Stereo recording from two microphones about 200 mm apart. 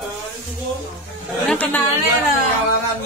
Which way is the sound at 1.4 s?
5° left (ahead or behind).